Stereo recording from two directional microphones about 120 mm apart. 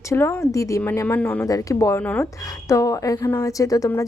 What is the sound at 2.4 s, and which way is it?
Speech, 30° left (ahead or behind).